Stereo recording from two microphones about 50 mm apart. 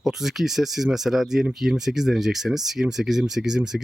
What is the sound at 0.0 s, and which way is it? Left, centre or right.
Speech, centre.